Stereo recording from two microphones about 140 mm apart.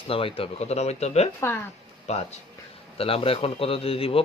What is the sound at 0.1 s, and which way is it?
Speech, 40° left (ahead or behind).